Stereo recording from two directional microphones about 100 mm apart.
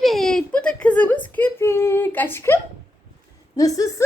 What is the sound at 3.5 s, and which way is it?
Speech, 35° left (ahead or behind).